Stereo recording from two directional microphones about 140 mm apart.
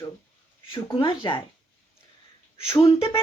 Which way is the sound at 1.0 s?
35° left (ahead or behind).